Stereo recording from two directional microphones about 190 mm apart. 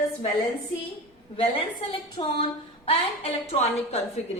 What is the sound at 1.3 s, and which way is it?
A woman's voice, 30° left (ahead or behind).